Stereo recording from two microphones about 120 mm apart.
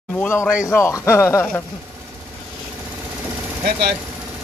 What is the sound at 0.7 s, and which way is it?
Speech, 25° left (ahead or behind).